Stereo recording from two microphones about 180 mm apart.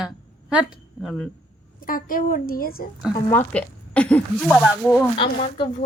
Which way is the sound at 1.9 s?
50° left (ahead or behind).